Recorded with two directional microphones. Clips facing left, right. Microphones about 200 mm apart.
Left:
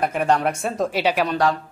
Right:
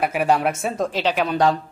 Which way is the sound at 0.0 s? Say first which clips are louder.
Right 1 dB; 5° right (ahead or behind).